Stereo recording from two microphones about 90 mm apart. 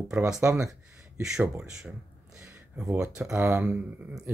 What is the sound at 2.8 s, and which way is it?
Speech, 10° right (ahead or behind).